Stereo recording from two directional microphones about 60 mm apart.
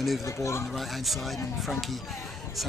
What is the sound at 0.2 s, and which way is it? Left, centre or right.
Speech, left.